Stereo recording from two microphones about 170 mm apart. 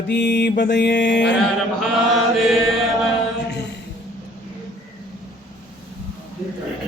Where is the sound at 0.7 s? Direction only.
90° left.